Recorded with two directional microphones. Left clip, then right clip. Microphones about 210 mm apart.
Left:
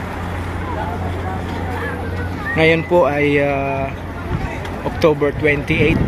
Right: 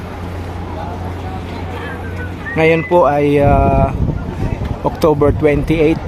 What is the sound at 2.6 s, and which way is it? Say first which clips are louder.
Speech: right 2 dB; 10° right (ahead or behind).